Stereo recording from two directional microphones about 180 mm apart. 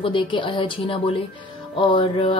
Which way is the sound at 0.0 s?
30° left (ahead or behind).